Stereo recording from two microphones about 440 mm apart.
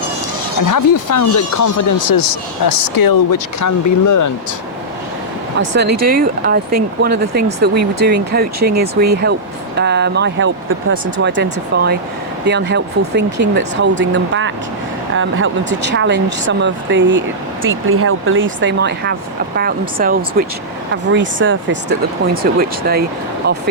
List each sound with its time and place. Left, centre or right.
0.6 s speech: left
6.0 s speech: centre